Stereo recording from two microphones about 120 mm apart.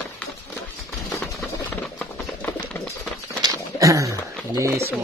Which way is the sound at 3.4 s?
25° right (ahead or behind).